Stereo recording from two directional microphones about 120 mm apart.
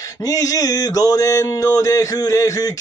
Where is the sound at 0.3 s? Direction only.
30° left (ahead or behind).